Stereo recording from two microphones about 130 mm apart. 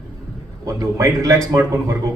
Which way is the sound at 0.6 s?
25° right (ahead or behind).